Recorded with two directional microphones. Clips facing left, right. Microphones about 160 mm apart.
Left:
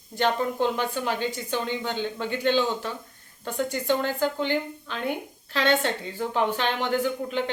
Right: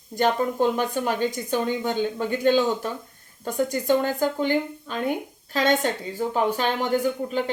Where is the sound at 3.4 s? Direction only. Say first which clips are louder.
Right 3 dB; 40° right (ahead or behind).